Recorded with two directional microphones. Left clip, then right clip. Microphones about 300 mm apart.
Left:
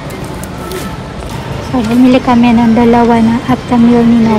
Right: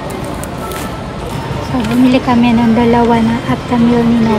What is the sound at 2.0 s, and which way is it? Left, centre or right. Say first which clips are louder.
A woman's voice: left 3 dB; centre.